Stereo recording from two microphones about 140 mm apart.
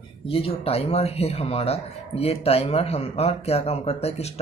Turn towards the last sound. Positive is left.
turn(degrees=45)  # may be behind; listen again after turning